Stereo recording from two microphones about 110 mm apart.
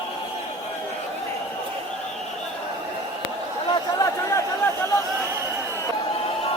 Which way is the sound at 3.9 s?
35° left (ahead or behind).